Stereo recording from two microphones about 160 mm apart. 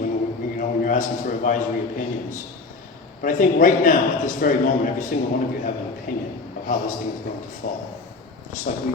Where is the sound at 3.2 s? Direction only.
55° left (ahead or behind).